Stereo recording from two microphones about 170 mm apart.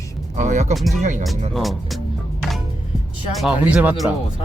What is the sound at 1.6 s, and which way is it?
Speech, centre (ahead or behind).